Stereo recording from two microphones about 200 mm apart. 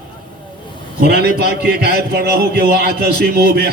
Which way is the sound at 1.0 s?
50° right (ahead or behind).